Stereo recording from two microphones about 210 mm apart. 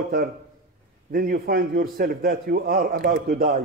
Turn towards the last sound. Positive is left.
turn(degrees=-45)  # may be behind; listen again after turning